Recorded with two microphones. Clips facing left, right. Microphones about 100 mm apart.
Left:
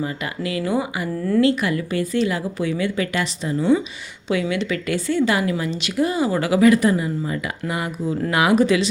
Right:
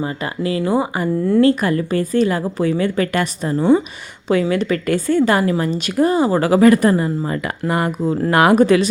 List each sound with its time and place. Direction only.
0.0 s speech: 35° right (ahead or behind)
1.4 s a woman's voice: 40° right (ahead or behind)